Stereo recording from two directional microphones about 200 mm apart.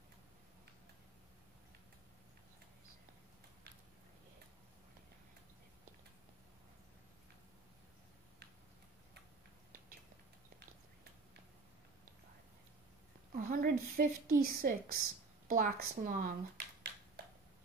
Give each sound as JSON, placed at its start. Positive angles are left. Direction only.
{"t": 13.3, "sound": "a woman's voice", "side_deg": -45}